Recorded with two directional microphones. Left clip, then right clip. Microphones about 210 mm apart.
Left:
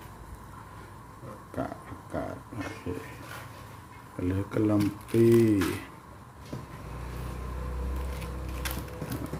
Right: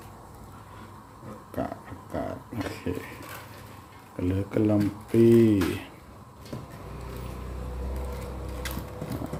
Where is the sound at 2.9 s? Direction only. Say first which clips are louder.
Right 4 dB; 30° right (ahead or behind).